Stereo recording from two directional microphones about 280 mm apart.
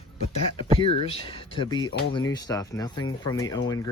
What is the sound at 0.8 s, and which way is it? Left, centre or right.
Speech, centre.